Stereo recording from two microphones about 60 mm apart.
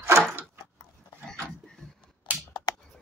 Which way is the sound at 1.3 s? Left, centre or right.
Centre.